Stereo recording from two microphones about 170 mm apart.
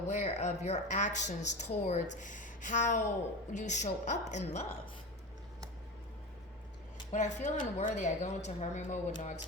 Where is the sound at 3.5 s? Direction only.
45° left (ahead or behind).